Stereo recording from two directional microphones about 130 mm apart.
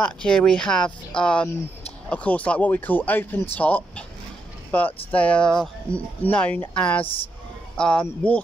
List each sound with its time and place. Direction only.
0.0 s speech: 5° left (ahead or behind)